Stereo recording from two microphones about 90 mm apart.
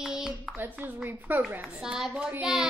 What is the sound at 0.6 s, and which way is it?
Speech, 20° right (ahead or behind).